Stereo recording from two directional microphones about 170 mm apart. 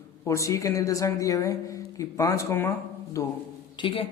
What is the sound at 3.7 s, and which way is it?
Speech, 30° left (ahead or behind).